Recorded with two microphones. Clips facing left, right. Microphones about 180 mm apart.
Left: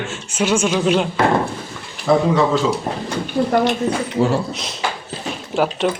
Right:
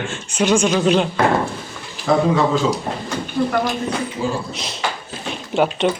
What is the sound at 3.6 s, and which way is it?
Speech, 70° left (ahead or behind).